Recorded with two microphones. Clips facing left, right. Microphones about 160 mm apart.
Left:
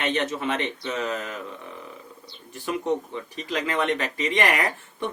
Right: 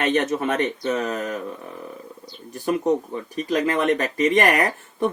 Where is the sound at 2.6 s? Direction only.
45° right (ahead or behind).